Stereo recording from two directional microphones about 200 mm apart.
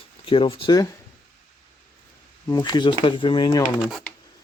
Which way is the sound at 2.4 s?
20° left (ahead or behind).